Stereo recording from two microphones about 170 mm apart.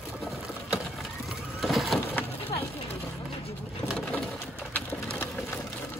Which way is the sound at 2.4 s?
35° left (ahead or behind).